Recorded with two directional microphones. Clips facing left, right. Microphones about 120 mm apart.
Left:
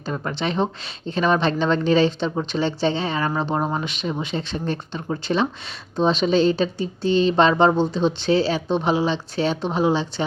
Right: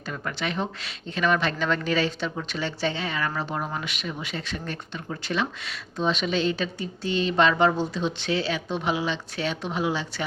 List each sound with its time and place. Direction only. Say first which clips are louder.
0.1 s a woman's voice: left 5 dB; 30° left (ahead or behind)